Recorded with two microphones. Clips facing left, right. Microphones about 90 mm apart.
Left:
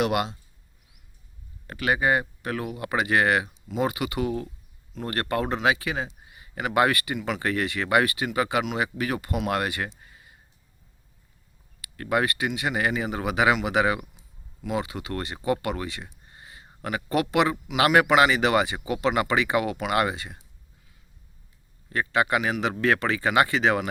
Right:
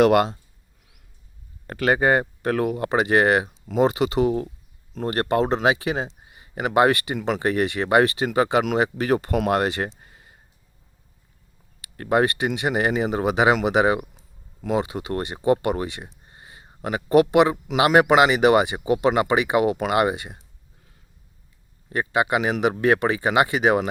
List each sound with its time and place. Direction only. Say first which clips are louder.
0.0 s speech: right 8 dB; 45° right (ahead or behind)
1.6 s speech: right 4 dB; 40° right (ahead or behind)
2.9 s speech: right 3 dB; 25° right (ahead or behind)
7.2 s speech: right 5 dB; 40° right (ahead or behind)
7.4 s speech: right 5 dB; 25° right (ahead or behind)
10.0 s a sound: right 1 dB; 35° right (ahead or behind)
11.8 s speech: right 5 dB; 30° right (ahead or behind)
21.8 s speech: right 2 dB; 20° right (ahead or behind)